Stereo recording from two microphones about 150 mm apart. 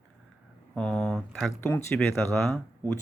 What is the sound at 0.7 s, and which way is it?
Speech, 5° left (ahead or behind).